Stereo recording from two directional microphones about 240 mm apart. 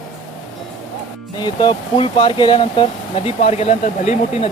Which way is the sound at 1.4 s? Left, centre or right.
Centre.